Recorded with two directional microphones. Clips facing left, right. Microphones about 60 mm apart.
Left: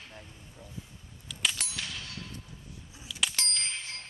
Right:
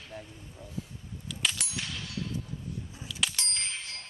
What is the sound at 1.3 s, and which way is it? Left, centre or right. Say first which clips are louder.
Clang: even; centre.